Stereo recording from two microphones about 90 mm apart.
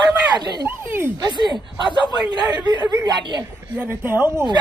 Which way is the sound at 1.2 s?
55° right (ahead or behind).